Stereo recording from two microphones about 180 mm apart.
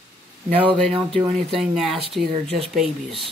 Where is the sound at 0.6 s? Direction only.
5° left (ahead or behind).